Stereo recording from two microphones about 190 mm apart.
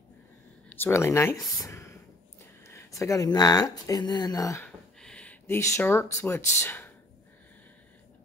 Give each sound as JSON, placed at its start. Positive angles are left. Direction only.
{"t": 0.7, "sound": "speech", "side_deg": 15}
{"t": 1.6, "sound": "a sound", "side_deg": 15}
{"t": 2.6, "sound": "speech", "side_deg": 15}
{"t": 5.0, "sound": "speech", "side_deg": 5}